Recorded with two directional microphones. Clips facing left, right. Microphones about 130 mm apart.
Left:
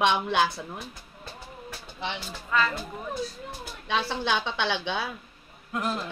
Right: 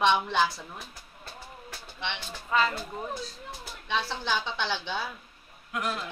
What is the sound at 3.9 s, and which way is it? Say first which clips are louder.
A woman's voice: left 3 dB; 65° left (ahead or behind).